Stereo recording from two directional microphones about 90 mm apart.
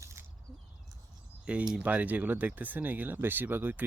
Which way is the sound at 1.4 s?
10° right (ahead or behind).